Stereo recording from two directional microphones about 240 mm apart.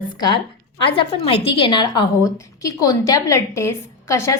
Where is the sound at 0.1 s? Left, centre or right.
Centre.